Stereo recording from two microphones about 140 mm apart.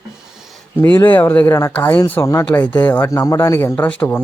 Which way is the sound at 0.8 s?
15° left (ahead or behind).